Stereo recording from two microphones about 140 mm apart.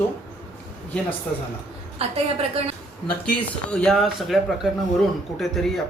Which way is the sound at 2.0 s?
45° right (ahead or behind).